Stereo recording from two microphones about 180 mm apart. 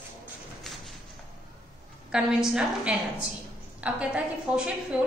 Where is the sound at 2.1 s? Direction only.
5° right (ahead or behind).